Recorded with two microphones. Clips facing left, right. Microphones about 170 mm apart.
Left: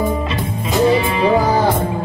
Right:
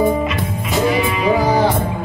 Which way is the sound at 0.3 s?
30° left (ahead or behind).